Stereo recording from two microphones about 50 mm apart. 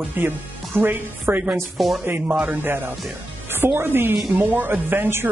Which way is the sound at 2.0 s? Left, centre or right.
Right.